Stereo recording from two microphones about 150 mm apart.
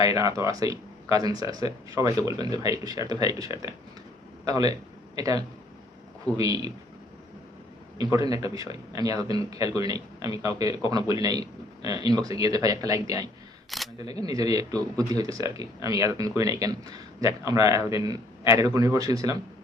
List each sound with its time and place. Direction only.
0.0 s speech: 25° right (ahead or behind)
7.9 s speech: 25° right (ahead or behind)
13.7 s speech: centre (ahead or behind)
14.0 s speech: 25° right (ahead or behind)